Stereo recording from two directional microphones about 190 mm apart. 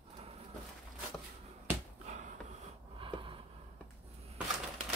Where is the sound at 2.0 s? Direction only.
40° right (ahead or behind).